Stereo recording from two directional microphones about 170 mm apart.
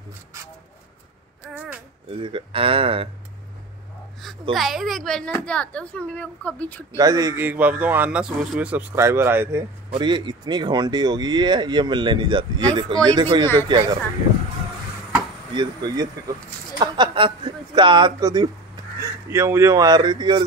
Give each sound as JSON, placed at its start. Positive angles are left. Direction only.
{"t": 1.4, "sound": "a sound", "side_deg": -10}
{"t": 2.1, "sound": "speech", "side_deg": -30}
{"t": 4.6, "sound": "speech", "side_deg": 0}
{"t": 7.0, "sound": "speech", "side_deg": -20}
{"t": 7.4, "sound": "speech", "side_deg": -10}
{"t": 9.9, "sound": "speech", "side_deg": -25}
{"t": 15.5, "sound": "speech", "side_deg": -25}